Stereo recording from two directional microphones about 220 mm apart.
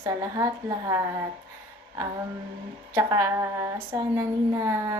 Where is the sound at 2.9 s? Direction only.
15° right (ahead or behind).